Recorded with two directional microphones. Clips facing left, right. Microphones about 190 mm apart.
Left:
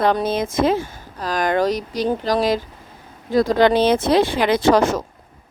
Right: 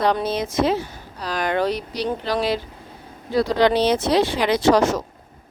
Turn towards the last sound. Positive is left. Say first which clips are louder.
# left 1 dB
turn(degrees=55)  # may be behind; listen again after turning